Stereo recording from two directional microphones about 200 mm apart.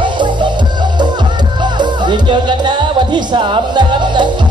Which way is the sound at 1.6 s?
20° right (ahead or behind).